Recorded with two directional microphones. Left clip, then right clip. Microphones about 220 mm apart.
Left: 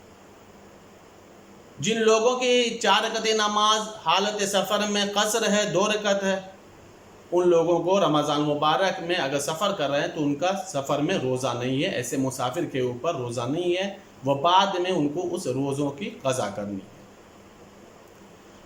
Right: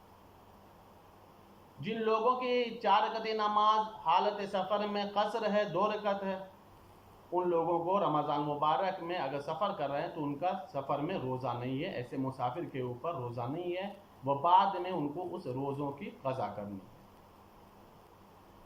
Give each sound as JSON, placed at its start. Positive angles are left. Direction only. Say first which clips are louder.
{"t": 1.8, "sound": "a man's voice", "louder": "left 11 dB", "side_deg": 45}